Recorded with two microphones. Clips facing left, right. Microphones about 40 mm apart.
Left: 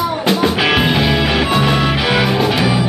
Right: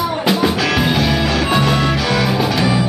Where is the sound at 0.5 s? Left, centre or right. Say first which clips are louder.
Left 2 dB; left.